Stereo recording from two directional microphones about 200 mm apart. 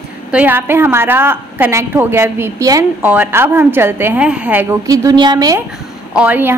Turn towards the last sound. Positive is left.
turn(degrees=-10)  # may be behind; listen again after turning